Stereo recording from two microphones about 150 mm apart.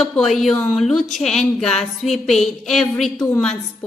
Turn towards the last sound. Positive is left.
turn(degrees=5)  # may be behind; listen again after turning